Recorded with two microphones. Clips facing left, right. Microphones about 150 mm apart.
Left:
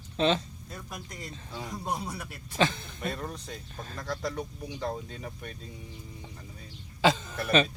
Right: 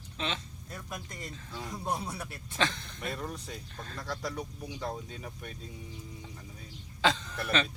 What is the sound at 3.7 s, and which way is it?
Speech, 10° left (ahead or behind).